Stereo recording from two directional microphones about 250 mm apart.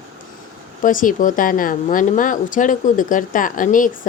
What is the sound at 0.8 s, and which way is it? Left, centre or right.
A woman's voice, left.